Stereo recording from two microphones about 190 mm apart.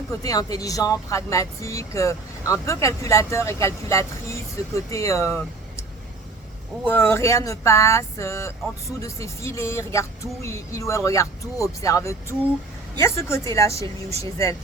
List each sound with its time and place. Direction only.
0.1 s speech: 20° left (ahead or behind)
6.8 s speech: 10° left (ahead or behind)